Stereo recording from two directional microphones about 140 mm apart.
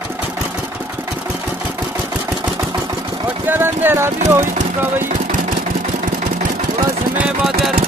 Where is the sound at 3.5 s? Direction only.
15° right (ahead or behind).